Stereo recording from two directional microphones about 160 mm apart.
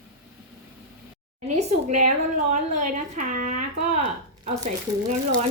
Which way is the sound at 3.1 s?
55° right (ahead or behind).